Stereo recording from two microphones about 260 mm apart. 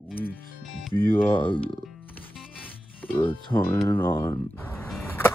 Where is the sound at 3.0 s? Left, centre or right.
Centre.